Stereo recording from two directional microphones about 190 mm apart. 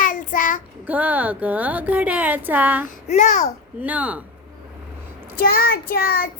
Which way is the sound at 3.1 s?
40° left (ahead or behind).